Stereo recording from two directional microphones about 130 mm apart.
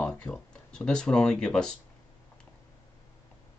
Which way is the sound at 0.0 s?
10° left (ahead or behind).